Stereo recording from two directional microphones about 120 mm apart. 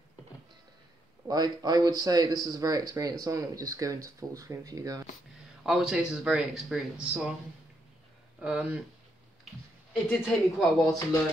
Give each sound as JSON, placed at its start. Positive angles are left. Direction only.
{"t": 1.2, "sound": "speech", "side_deg": -35}
{"t": 5.7, "sound": "speech", "side_deg": -5}
{"t": 8.4, "sound": "speech", "side_deg": -10}
{"t": 10.0, "sound": "speech", "side_deg": 5}